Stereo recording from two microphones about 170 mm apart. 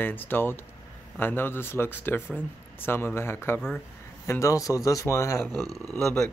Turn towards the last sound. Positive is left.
turn(degrees=5)  # may be behind; listen again after turning